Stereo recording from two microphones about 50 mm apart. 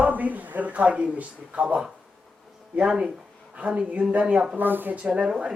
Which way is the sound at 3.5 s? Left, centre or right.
Right.